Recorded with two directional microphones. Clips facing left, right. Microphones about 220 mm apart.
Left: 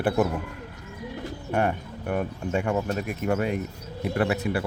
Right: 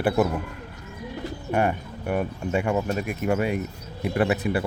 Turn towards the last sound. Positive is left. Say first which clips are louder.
# right 2 dB
turn(degrees=-20)  # may be behind; listen again after turning